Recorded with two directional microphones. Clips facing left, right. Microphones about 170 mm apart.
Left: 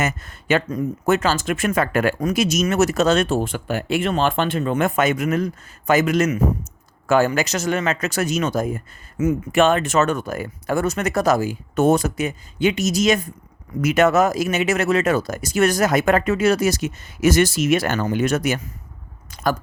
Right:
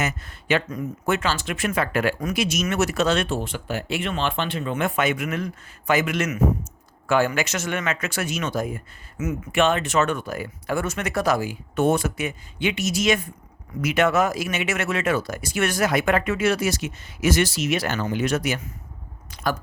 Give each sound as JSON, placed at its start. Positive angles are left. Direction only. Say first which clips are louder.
{"t": 0.0, "sound": "speech", "louder": "left 3 dB", "side_deg": 45}
{"t": 9.1, "sound": "speech", "louder": "left 7 dB", "side_deg": 30}
{"t": 9.6, "sound": "speech", "louder": "left 3 dB", "side_deg": 45}
{"t": 19.3, "sound": "a sound", "louder": "left 4 dB", "side_deg": 45}